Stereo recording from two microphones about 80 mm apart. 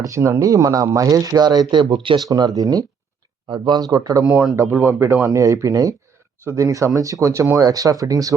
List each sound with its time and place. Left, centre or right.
0.0 s speech: right
2.2 s speech: right
3.5 s speech: right
4.7 s speech: right
5.3 s speech: right